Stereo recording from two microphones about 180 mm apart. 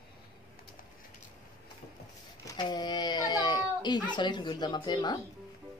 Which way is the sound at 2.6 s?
25° left (ahead or behind).